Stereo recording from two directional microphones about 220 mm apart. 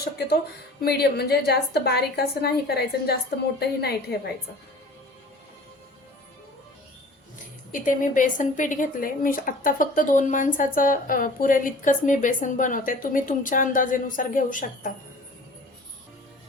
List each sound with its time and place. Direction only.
0.8 s a woman's voice: 45° left (ahead or behind)
7.7 s speech: 35° left (ahead or behind)